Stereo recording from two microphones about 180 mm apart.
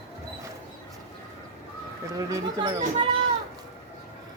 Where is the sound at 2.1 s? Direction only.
25° right (ahead or behind).